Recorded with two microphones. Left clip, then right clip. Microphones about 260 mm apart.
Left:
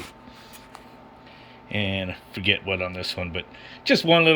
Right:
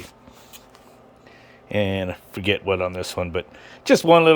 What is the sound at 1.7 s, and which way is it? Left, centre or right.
Speech, centre.